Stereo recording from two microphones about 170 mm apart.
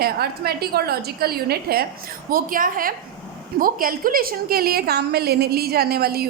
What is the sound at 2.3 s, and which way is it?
A woman's voice, 55° right (ahead or behind).